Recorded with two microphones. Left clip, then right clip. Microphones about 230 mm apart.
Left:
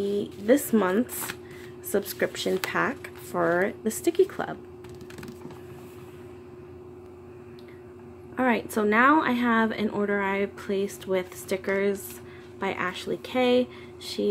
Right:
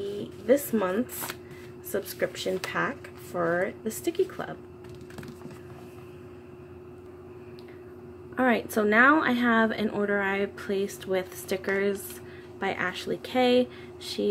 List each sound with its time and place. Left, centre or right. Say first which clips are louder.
0.5 s speech: left 2 dB; left
8.4 s speech: even; centre